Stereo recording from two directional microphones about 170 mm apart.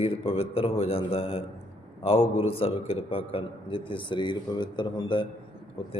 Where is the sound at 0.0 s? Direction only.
35° left (ahead or behind).